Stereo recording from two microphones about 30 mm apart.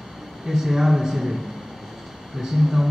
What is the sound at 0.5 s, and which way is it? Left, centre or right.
Speech, centre.